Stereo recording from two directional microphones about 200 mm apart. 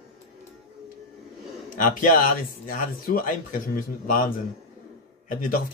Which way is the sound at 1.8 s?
40° left (ahead or behind).